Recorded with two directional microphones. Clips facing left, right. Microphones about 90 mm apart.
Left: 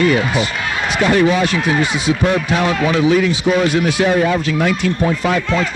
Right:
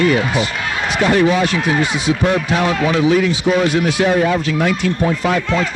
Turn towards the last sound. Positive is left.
turn(degrees=-35)  # may be behind; listen again after turning